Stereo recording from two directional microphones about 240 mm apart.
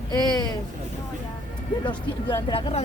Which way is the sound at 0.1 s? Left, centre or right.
Centre.